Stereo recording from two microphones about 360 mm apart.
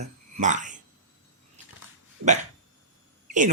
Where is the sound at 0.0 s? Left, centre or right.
Centre.